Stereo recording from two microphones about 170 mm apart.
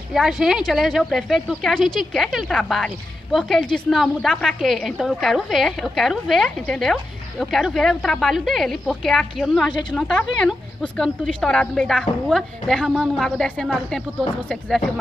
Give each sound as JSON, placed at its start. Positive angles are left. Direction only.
{"t": 0.1, "sound": "speech", "side_deg": 0}
{"t": 9.7, "sound": "a woman's voice", "side_deg": 25}
{"t": 9.9, "sound": "speech", "side_deg": 5}